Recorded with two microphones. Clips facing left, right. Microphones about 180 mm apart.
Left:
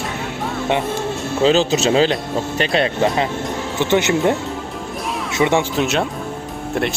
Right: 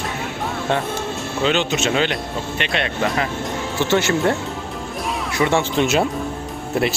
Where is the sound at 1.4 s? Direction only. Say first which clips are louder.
Left 5 dB; 35° left (ahead or behind); by 4.3 s 20° left (ahead or behind).